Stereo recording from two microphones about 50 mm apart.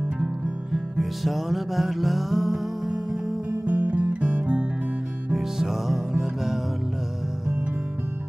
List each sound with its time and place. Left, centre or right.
0.7 s music: centre
3.6 s music: right
5.3 s music: centre